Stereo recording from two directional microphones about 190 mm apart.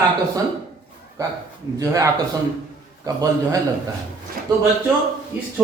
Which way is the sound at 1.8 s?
15° right (ahead or behind).